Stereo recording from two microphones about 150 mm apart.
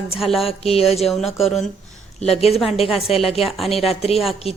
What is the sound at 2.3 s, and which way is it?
A woman's voice, 45° left (ahead or behind).